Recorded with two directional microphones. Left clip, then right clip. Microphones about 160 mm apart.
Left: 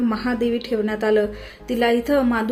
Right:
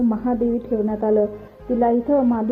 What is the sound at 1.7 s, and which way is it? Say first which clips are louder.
Speech: even; 35° left (ahead or behind).